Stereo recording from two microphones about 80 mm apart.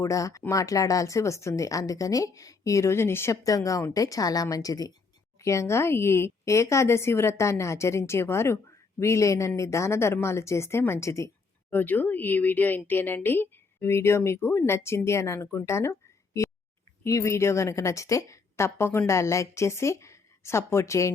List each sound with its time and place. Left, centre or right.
0.0 s speech: left
3.4 s speech: left
5.4 s a woman's voice: left
11.7 s a woman's voice: left